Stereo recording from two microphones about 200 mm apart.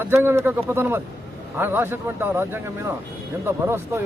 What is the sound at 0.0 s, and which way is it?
Speech, 10° right (ahead or behind).